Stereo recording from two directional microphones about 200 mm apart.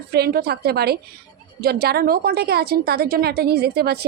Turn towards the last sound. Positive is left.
turn(degrees=-50)  # may be behind; listen again after turning